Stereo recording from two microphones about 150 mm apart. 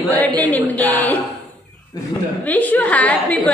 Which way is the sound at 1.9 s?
25° left (ahead or behind).